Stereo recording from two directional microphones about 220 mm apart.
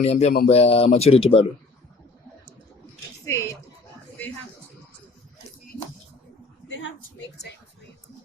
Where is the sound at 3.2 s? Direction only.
15° left (ahead or behind).